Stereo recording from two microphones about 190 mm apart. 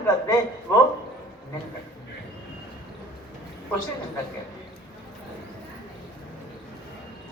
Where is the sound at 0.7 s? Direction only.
15° left (ahead or behind).